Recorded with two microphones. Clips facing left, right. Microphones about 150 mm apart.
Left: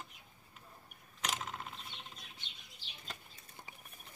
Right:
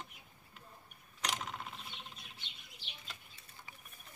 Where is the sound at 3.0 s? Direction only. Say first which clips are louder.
Left 3 dB; 40° left (ahead or behind).